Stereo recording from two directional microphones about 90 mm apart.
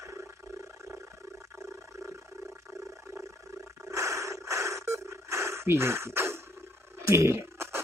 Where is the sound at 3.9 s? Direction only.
35° right (ahead or behind).